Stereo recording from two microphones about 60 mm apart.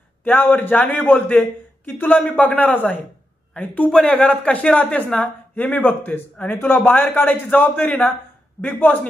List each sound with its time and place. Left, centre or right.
0.2 s a man's voice: left